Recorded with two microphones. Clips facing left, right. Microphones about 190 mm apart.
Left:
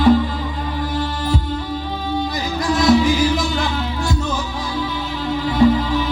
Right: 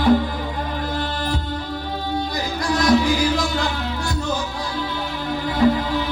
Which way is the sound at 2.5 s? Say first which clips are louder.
Left 3 dB; 20° left (ahead or behind).